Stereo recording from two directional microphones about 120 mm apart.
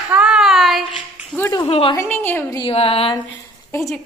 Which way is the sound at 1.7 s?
55° left (ahead or behind).